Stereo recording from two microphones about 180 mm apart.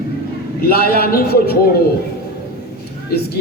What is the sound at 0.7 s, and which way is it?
Speech, 55° left (ahead or behind).